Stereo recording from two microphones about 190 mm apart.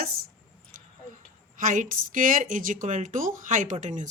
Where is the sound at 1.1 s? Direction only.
45° right (ahead or behind).